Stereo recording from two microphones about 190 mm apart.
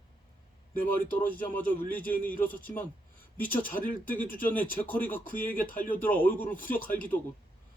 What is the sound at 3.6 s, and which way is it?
Speech, 45° left (ahead or behind).